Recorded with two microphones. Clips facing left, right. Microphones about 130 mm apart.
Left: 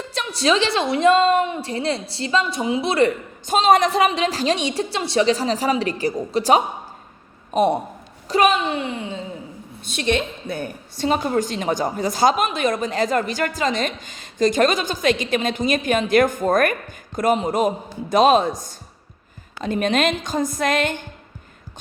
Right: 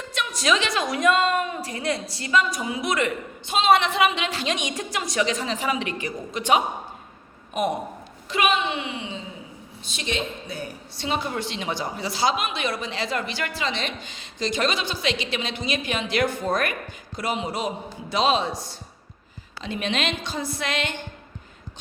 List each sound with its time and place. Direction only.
0.0 s a woman's voice: 35° left (ahead or behind)
9.8 s a woman's voice: 55° left (ahead or behind)